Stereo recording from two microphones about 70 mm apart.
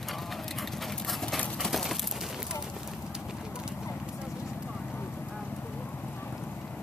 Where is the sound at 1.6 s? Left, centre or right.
Centre.